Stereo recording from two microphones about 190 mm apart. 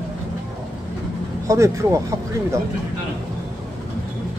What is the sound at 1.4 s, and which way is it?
Speech, 15° right (ahead or behind).